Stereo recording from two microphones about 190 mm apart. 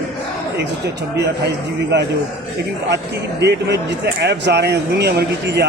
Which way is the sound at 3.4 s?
60° right (ahead or behind).